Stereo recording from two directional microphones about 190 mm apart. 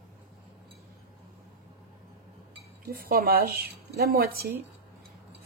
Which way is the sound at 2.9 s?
50° right (ahead or behind).